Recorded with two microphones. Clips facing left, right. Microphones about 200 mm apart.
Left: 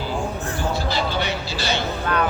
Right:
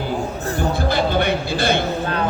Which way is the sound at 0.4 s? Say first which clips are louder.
Right 4 dB; 40° right (ahead or behind).